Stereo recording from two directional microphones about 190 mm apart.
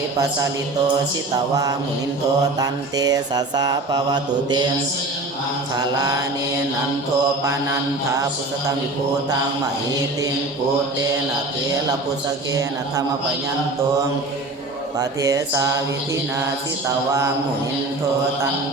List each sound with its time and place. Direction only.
2.6 s mantra: 20° right (ahead or behind)
5.7 s mantra: 20° right (ahead or behind)
14.9 s speech: 20° right (ahead or behind)